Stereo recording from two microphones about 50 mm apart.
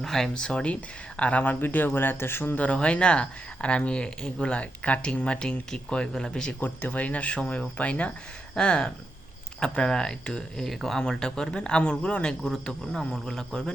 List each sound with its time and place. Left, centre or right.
0.0 s speech: centre; by 1.5 s left
1.6 s speech: left
2.6 s speech: left
6.6 s speech: left
12.4 s a man's voice: centre